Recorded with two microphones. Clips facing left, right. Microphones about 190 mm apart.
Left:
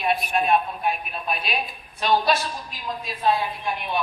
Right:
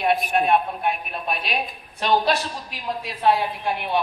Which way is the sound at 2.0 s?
65° right (ahead or behind).